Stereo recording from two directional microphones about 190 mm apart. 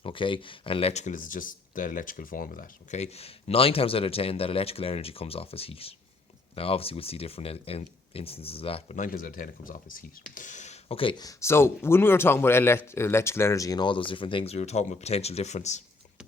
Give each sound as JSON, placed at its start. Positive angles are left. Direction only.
{"t": 0.0, "sound": "speech", "side_deg": 25}
{"t": 9.0, "sound": "speech", "side_deg": 45}